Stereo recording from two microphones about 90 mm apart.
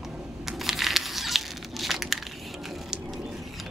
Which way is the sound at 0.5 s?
5° right (ahead or behind).